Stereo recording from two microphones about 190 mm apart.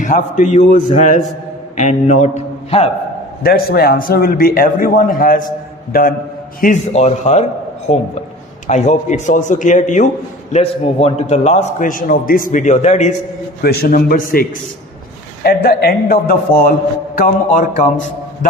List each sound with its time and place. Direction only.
0.0 s a man's voice: 40° left (ahead or behind)
3.4 s a man's voice: 55° left (ahead or behind); by 13.1 s 40° left (ahead or behind)
13.6 s a man's voice: 55° left (ahead or behind)
15.4 s a man's voice: 55° left (ahead or behind)